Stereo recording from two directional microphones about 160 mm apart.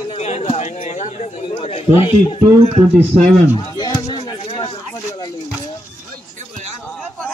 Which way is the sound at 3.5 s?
25° left (ahead or behind).